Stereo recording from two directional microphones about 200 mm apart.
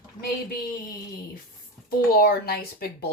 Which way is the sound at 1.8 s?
50° left (ahead or behind).